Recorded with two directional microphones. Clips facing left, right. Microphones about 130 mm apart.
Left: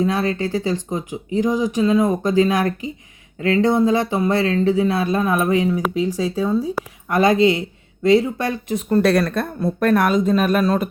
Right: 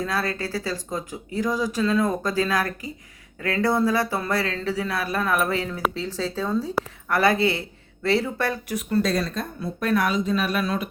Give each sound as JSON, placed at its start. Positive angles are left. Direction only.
{"t": 0.0, "sound": "speech", "side_deg": 20}
{"t": 9.0, "sound": "speech", "side_deg": 65}